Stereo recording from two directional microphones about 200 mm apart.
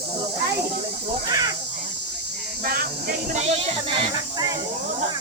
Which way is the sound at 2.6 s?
45° right (ahead or behind).